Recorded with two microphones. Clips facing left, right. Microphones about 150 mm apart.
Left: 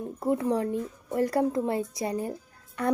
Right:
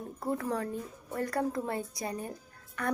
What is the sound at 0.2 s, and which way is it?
A woman's voice, 25° left (ahead or behind).